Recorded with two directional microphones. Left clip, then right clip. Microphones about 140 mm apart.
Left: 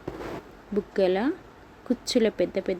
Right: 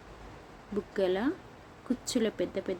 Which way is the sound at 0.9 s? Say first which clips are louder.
Left 5 dB; 15° left (ahead or behind).